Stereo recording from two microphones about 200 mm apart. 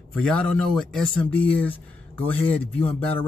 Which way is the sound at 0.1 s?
5° left (ahead or behind).